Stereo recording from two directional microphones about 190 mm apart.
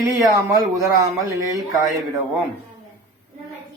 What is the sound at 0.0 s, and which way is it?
Speech, 15° right (ahead or behind).